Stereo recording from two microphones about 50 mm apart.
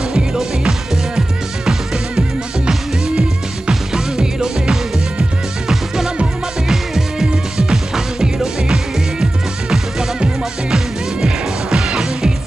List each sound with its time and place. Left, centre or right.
0.1 s music: centre
6.7 s music: centre